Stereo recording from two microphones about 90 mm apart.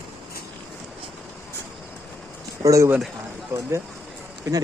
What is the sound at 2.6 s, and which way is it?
Speech, 40° right (ahead or behind).